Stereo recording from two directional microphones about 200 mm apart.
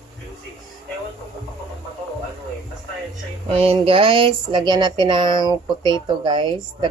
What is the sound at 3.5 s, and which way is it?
Speech, 30° right (ahead or behind).